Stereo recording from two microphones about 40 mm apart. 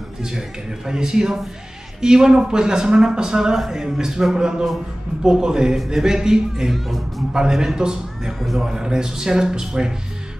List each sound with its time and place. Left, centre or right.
0.2 s a man's voice: centre
3.5 s a man's voice: centre
6.7 s a man's voice: centre
8.4 s speech: centre
8.6 s a man's voice: centre